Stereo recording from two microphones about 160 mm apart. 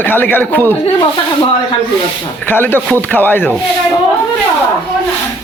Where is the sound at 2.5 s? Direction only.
10° left (ahead or behind).